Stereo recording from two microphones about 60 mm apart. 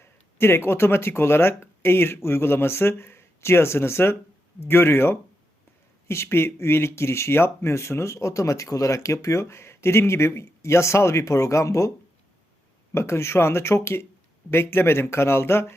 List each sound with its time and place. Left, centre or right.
0.0 s speech: left
6.2 s speech: left
12.9 s speech: left